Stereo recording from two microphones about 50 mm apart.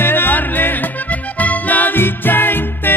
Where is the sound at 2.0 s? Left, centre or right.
Left.